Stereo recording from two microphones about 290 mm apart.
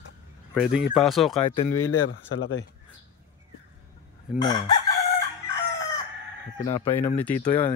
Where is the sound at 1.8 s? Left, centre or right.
Left.